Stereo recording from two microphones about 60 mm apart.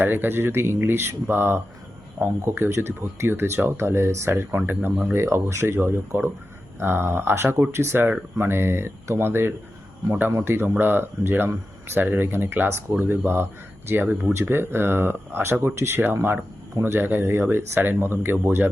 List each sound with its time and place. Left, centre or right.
0.0 s speech: right
5.1 s speech: right